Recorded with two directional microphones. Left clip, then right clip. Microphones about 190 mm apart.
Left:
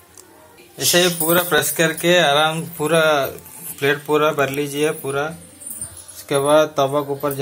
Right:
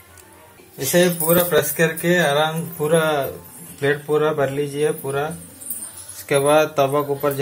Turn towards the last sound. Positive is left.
turn(degrees=15)  # may be behind; listen again after turning